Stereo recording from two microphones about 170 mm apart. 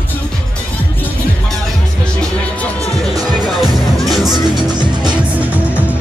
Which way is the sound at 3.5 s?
Centre (ahead or behind).